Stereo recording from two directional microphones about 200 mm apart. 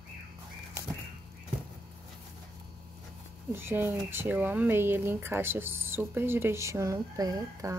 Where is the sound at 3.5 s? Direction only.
10° right (ahead or behind).